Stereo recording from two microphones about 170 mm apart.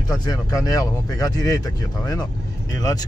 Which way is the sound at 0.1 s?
20° left (ahead or behind).